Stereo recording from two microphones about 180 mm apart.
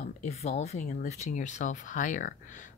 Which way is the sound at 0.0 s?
35° left (ahead or behind).